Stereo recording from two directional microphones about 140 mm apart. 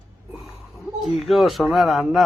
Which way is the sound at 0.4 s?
Centre (ahead or behind).